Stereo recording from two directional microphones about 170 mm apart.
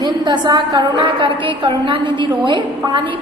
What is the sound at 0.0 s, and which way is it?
A woman's voice, 25° right (ahead or behind).